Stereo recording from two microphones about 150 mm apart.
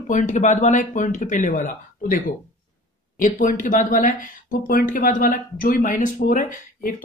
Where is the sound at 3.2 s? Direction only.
60° left (ahead or behind).